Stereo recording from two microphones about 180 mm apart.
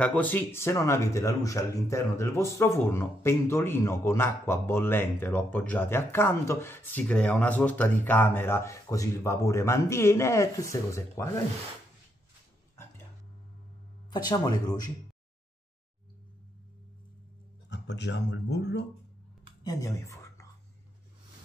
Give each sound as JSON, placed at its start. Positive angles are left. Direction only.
{"t": 0.0, "sound": "speech", "side_deg": 10}
{"t": 14.1, "sound": "speech", "side_deg": 20}
{"t": 17.6, "sound": "speech", "side_deg": 75}
{"t": 19.6, "sound": "a sound", "side_deg": 20}